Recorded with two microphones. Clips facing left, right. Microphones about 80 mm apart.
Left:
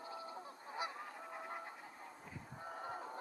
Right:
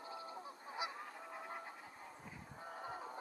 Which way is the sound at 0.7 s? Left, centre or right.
Centre.